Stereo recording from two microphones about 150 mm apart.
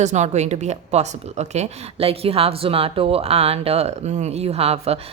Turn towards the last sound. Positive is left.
turn(degrees=-45)  # may be behind; listen again after turning